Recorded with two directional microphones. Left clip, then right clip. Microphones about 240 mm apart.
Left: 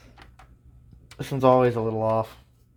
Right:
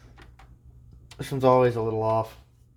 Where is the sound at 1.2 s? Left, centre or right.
Centre.